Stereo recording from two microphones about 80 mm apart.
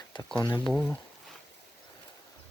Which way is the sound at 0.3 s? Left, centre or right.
Left.